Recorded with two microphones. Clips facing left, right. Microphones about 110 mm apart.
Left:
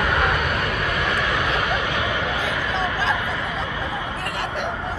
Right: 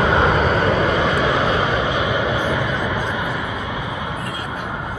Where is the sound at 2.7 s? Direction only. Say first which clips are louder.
Even; 90° left.